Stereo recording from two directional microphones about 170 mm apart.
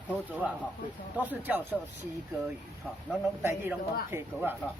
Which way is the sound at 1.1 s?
10° right (ahead or behind).